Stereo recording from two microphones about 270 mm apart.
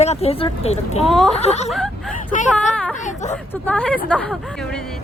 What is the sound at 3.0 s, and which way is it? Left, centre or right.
Speech, left.